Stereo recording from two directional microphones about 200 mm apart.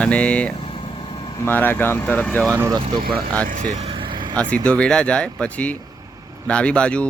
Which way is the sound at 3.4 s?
40° right (ahead or behind).